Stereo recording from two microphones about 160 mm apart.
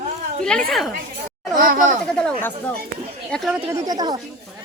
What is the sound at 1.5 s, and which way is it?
Speech, 55° right (ahead or behind).